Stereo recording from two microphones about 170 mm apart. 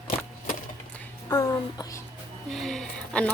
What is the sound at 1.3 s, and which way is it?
Speech, 20° left (ahead or behind).